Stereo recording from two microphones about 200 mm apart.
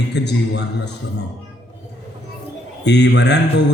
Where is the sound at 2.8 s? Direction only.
60° left (ahead or behind).